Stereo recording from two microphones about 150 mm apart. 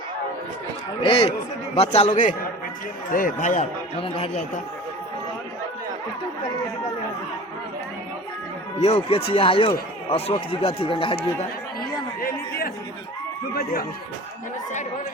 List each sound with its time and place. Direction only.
1.0 s speech: 40° left (ahead or behind)
3.1 s speech: 65° left (ahead or behind)
8.8 s speech: 40° left (ahead or behind)
12.2 s a man's voice: 75° left (ahead or behind)